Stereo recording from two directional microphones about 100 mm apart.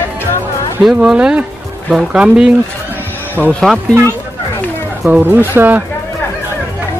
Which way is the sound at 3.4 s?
15° left (ahead or behind).